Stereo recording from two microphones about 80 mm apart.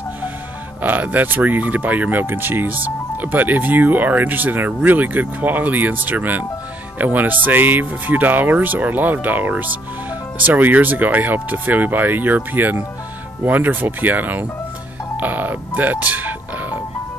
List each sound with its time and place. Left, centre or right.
0.8 s speech: right
15.1 s music: right